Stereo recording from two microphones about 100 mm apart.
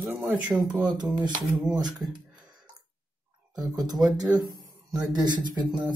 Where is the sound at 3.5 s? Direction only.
40° right (ahead or behind).